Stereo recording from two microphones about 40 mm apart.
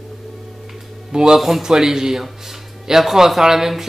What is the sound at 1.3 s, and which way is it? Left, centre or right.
Speech, centre.